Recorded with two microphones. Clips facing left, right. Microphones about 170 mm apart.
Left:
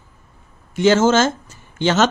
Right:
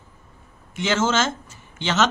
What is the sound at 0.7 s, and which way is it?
Speech, 40° left (ahead or behind).